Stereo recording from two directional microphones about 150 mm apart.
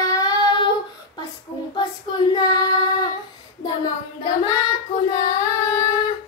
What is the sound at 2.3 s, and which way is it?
Child singing, 25° left (ahead or behind).